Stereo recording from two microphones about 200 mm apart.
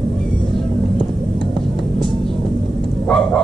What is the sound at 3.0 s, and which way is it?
Bow-wow, 5° left (ahead or behind).